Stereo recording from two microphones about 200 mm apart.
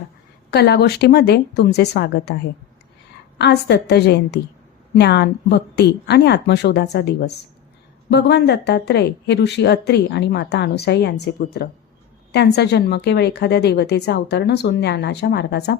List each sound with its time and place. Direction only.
0.5 s a woman's voice: 55° left (ahead or behind)